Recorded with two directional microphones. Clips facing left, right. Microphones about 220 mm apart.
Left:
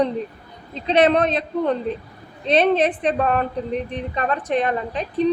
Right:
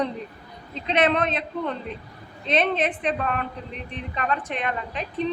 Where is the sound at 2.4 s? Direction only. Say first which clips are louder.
Left 6 dB; 35° left (ahead or behind).